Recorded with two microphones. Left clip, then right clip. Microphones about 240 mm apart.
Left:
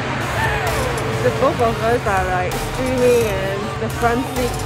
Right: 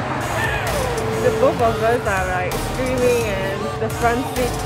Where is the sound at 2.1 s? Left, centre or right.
Centre.